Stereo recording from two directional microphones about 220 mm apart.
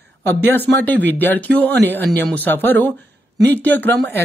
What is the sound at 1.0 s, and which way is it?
Speech, 10° left (ahead or behind).